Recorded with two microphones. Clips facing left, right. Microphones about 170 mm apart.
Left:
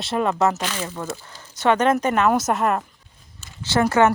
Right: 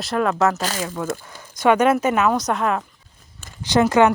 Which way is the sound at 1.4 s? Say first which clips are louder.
Right 2 dB; 10° right (ahead or behind).